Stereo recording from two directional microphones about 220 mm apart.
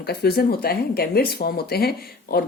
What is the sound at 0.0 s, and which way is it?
Speech, 45° left (ahead or behind).